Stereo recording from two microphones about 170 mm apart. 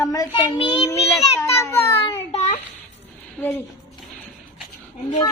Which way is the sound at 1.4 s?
15° left (ahead or behind).